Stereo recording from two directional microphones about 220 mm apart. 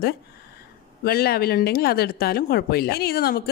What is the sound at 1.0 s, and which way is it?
A woman's voice, 45° left (ahead or behind).